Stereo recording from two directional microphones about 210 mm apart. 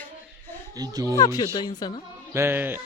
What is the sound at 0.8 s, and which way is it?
Speech, 15° right (ahead or behind).